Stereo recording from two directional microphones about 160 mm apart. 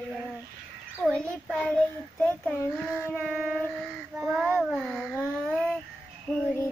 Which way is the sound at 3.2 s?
Centre (ahead or behind).